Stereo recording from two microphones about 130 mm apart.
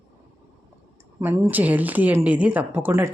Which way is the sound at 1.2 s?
20° right (ahead or behind).